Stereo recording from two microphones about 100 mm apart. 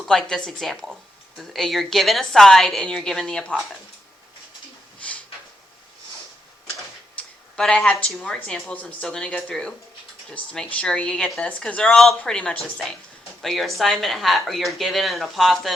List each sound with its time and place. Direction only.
0.0 s speech: 5° left (ahead or behind)
4.9 s a sound: 15° left (ahead or behind)
7.2 s speech: 10° left (ahead or behind)